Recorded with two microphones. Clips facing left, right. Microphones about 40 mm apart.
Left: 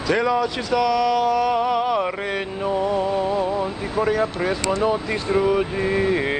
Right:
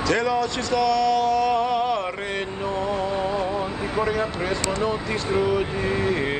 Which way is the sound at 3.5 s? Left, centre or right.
Centre.